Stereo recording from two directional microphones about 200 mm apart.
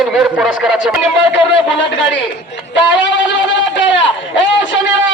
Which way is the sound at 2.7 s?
65° left (ahead or behind).